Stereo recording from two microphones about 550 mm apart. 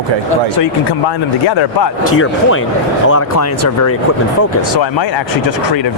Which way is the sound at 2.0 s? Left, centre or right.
Left.